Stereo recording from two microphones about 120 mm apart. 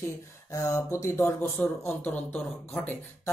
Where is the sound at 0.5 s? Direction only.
25° left (ahead or behind).